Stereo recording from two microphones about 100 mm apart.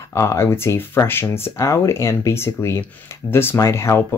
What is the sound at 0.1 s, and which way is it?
Speech, 30° left (ahead or behind).